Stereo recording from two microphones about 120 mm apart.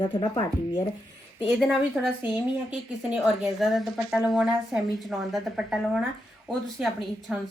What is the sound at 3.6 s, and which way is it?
A woman's voice, 5° right (ahead or behind).